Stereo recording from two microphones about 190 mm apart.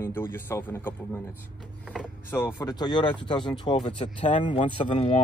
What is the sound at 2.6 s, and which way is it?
Speech, 20° left (ahead or behind).